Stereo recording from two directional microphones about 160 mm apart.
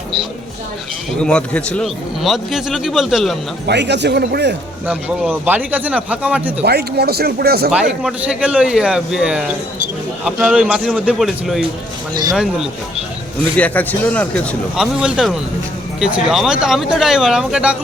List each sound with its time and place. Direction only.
1.2 s a man's voice: 5° left (ahead or behind)
3.7 s speech: 90° right
4.9 s speech: 5° right (ahead or behind)
6.7 s speech: 90° right
8.0 s a man's voice: 5° right (ahead or behind)
13.6 s speech: 10° left (ahead or behind)
14.8 s a man's voice: 5° right (ahead or behind)